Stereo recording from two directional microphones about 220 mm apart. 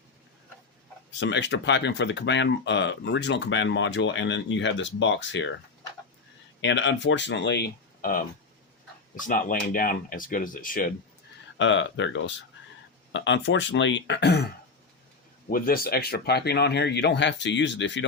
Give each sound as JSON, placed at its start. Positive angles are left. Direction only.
{"t": 1.2, "sound": "speech", "side_deg": 55}
{"t": 6.6, "sound": "speech", "side_deg": 55}
{"t": 11.5, "sound": "speech", "side_deg": 55}
{"t": 15.4, "sound": "speech", "side_deg": 40}